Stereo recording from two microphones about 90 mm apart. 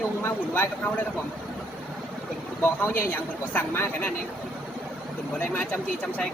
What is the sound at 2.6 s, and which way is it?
A man's voice, 20° left (ahead or behind).